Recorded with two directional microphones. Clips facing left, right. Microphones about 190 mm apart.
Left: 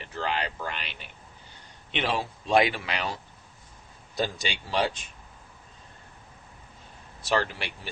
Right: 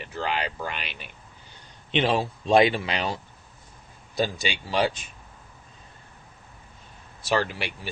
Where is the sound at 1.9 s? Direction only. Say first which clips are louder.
Right 5 dB; 25° right (ahead or behind).